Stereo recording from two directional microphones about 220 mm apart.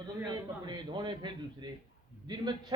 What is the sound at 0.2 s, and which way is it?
A man's voice, 20° right (ahead or behind).